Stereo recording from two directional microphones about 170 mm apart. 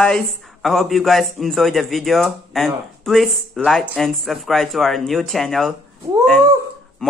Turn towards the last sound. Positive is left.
turn(degrees=5)  # may be behind; listen again after turning